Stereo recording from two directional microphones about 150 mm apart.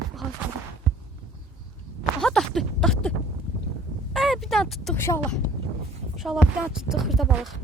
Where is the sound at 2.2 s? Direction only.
5° left (ahead or behind).